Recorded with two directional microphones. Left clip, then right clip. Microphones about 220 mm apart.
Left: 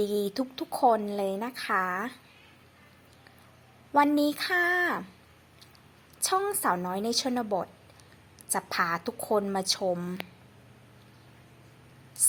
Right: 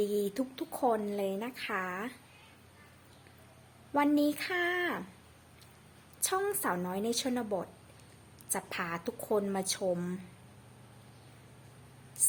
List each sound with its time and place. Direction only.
0.0 s speech: 40° left (ahead or behind)
0.3 s a woman's voice: 10° left (ahead or behind)
3.9 s a woman's voice: 10° left (ahead or behind)
6.2 s a woman's voice: 10° left (ahead or behind)